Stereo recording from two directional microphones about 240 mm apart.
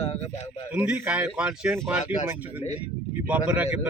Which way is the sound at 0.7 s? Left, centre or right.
Centre.